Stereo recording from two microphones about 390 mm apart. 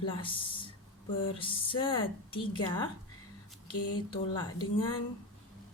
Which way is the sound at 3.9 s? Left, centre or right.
Centre.